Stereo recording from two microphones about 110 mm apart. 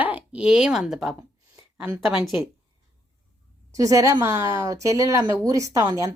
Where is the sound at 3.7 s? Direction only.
30° right (ahead or behind).